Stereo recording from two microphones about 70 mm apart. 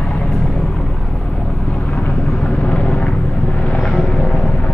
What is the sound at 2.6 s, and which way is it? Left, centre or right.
Vehicle, centre.